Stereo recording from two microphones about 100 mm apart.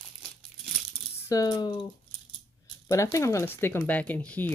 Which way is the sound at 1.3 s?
45° left (ahead or behind).